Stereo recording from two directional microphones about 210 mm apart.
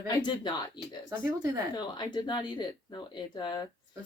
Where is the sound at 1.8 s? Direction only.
20° left (ahead or behind).